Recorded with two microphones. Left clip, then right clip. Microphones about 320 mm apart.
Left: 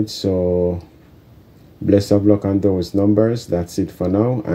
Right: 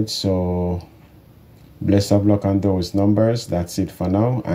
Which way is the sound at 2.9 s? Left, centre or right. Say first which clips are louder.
Left 2 dB; right.